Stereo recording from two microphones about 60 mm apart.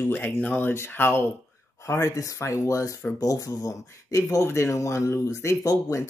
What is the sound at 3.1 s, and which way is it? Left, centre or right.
Speech, left.